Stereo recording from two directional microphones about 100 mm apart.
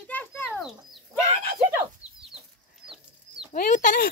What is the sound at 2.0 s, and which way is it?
Chicken, 40° left (ahead or behind).